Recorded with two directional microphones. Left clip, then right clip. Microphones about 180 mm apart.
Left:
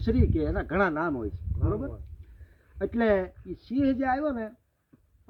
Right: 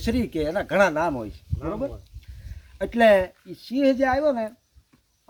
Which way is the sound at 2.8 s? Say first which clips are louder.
Right 8 dB; 40° right (ahead or behind).